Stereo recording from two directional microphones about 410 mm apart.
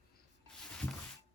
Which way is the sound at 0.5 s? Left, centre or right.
Centre.